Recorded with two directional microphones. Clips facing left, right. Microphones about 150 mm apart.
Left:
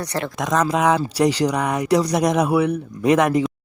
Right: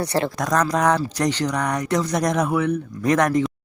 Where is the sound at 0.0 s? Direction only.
30° right (ahead or behind).